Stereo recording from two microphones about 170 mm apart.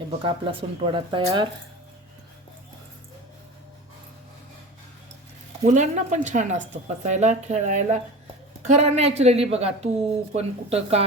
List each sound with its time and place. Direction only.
0.2 s speech: 30° right (ahead or behind)
5.6 s speech: 45° right (ahead or behind)